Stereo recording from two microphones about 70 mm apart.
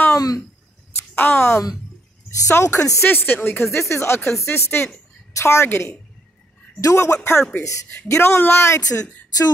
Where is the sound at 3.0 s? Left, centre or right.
Left.